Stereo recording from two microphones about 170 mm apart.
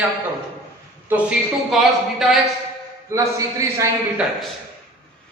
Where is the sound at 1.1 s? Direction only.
10° right (ahead or behind).